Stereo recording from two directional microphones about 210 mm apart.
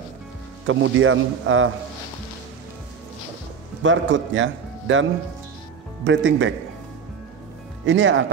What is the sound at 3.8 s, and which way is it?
Speech, 60° right (ahead or behind).